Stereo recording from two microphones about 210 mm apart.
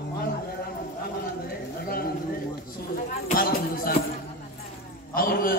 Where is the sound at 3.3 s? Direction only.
45° left (ahead or behind).